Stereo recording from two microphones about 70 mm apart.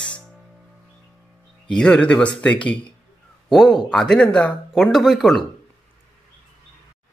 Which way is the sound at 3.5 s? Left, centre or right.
Centre.